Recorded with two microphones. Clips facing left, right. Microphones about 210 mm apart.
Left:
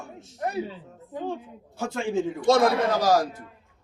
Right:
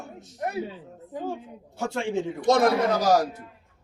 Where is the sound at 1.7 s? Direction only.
25° right (ahead or behind).